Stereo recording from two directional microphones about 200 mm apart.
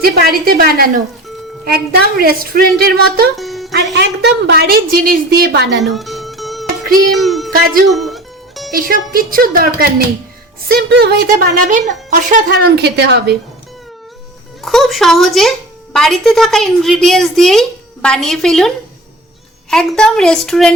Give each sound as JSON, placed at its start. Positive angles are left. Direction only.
{"t": 0.0, "sound": "a woman's voice", "side_deg": -50}
{"t": 3.3, "sound": "music", "side_deg": 0}
{"t": 3.9, "sound": "a woman's voice", "side_deg": -55}
{"t": 5.8, "sound": "music", "side_deg": 0}
{"t": 7.1, "sound": "speech", "side_deg": 0}
{"t": 7.9, "sound": "music", "side_deg": 0}
{"t": 9.1, "sound": "a woman's voice", "side_deg": -45}
{"t": 14.6, "sound": "a woman's voice", "side_deg": 0}
{"t": 19.7, "sound": "a woman's voice", "side_deg": 5}